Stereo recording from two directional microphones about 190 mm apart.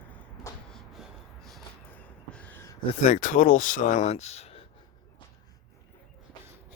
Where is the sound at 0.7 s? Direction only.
Centre (ahead or behind).